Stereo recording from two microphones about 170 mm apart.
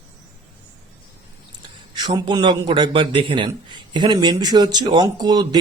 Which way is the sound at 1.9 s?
25° right (ahead or behind).